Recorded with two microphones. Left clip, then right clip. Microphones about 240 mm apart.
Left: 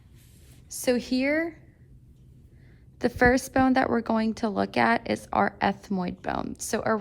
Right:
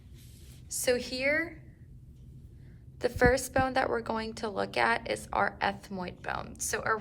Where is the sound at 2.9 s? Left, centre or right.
Left.